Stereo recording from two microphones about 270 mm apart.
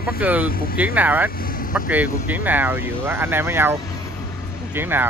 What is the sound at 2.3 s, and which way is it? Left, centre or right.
Speech, centre.